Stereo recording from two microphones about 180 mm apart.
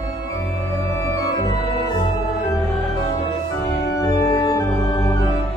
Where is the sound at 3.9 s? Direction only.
20° left (ahead or behind).